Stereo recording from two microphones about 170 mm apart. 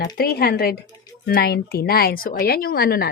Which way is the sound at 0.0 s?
65° left (ahead or behind).